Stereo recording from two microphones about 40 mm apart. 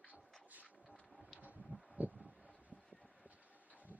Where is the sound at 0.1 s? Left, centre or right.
Right.